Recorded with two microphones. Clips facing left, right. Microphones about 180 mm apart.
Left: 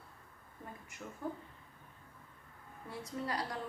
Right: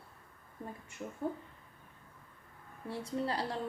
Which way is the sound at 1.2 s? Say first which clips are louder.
Right 4 dB; 25° right (ahead or behind).